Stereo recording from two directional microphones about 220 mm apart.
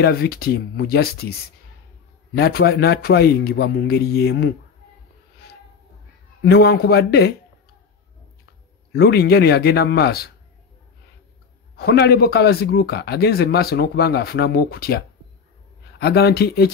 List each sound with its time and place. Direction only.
0.0 s a man's voice: 45° left (ahead or behind)
2.3 s a man's voice: 45° left (ahead or behind)
6.5 s a man's voice: 45° left (ahead or behind)
8.9 s a man's voice: 45° left (ahead or behind)
11.7 s a man's voice: 45° left (ahead or behind)